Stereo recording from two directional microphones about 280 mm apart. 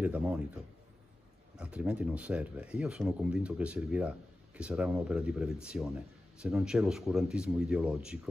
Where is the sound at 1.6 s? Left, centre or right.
Centre.